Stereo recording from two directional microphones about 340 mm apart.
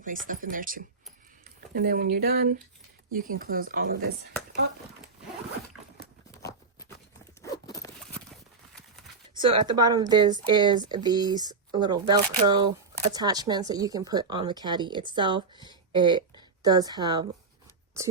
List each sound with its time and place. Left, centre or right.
0.3 s speech: right
7.4 s zipper: centre
9.4 s a woman's voice: centre